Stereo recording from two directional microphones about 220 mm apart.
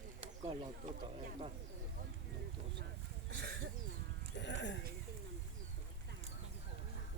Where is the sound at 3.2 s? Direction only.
50° right (ahead or behind).